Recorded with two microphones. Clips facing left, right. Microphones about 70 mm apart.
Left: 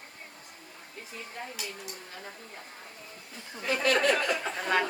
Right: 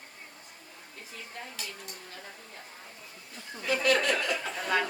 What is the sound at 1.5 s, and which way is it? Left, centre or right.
Speech, centre.